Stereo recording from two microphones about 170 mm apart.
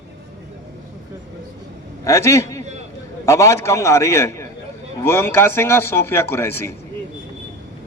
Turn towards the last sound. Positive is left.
turn(degrees=15)  # may be behind; listen again after turning